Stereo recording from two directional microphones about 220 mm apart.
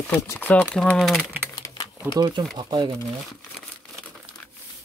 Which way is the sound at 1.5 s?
15° left (ahead or behind).